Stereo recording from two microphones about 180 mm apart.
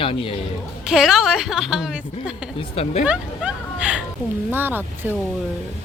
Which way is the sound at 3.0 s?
5° right (ahead or behind).